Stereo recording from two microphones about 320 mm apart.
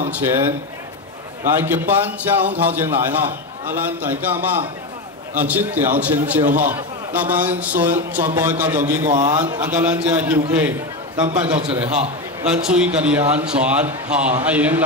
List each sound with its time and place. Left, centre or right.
0.1 s a man's voice: centre
1.6 s a man's voice: centre
11.2 s a man's voice: centre
12.4 s a man's voice: centre